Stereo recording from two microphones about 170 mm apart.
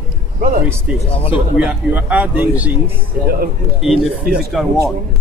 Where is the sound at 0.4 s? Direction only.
55° right (ahead or behind).